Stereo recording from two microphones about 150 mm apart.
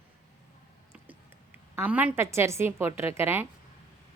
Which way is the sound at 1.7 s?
10° right (ahead or behind).